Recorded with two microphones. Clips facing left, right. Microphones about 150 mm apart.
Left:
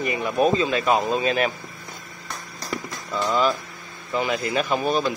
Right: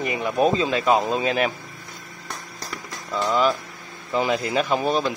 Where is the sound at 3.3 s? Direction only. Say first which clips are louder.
Right 1 dB; 15° right (ahead or behind).